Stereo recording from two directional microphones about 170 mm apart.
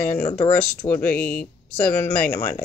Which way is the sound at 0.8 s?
10° left (ahead or behind).